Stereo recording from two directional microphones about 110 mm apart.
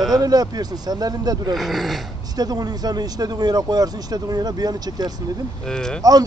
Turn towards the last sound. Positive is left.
turn(degrees=5)  # may be behind; listen again after turning